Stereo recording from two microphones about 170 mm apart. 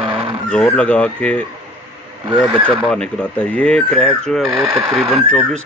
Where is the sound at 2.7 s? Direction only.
5° left (ahead or behind).